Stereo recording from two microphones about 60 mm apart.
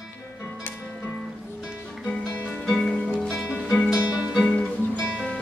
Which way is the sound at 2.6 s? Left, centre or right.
Centre.